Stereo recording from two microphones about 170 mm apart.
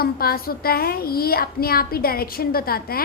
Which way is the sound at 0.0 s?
60° left (ahead or behind).